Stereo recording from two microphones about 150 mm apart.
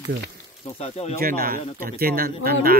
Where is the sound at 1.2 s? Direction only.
75° right (ahead or behind).